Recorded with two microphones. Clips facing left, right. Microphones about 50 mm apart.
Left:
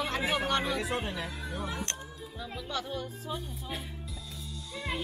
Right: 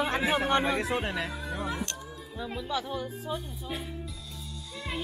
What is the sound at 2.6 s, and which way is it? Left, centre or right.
Music, centre.